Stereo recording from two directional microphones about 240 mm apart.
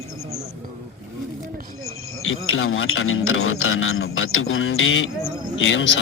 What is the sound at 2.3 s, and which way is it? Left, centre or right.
Speech, left.